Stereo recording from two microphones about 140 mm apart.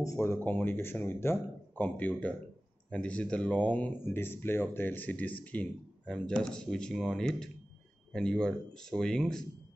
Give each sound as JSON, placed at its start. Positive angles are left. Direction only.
{"t": 0.0, "sound": "speech", "side_deg": 20}